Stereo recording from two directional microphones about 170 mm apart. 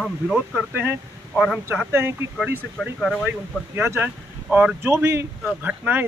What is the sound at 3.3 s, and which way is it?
Speech, 15° right (ahead or behind).